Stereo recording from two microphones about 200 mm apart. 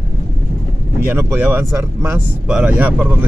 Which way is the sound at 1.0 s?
10° right (ahead or behind).